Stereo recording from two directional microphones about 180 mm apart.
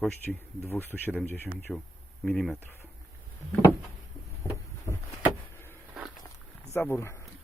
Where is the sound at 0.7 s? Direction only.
10° left (ahead or behind).